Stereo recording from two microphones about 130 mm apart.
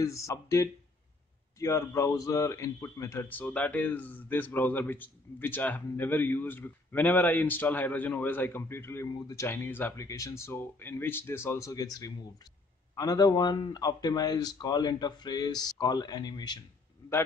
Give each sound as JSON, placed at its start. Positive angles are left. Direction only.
{"t": 0.0, "sound": "a man's voice", "side_deg": 25}